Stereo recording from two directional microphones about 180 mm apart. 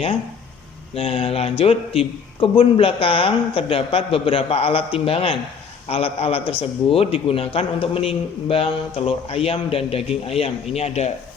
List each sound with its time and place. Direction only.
0.9 s a man's voice: 30° left (ahead or behind)